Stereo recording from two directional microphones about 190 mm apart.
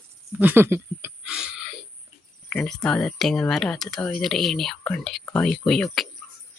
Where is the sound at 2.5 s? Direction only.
5° left (ahead or behind).